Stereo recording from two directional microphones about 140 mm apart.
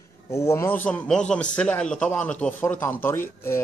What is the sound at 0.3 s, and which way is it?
Speech, 20° left (ahead or behind).